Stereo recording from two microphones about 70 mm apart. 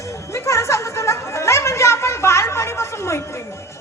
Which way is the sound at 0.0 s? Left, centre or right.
Left.